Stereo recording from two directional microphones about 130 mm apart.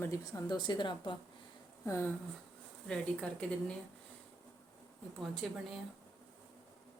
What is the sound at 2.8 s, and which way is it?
Speech, 5° left (ahead or behind).